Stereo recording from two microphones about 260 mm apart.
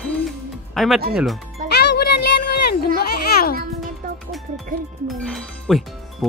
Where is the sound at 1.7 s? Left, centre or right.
Left.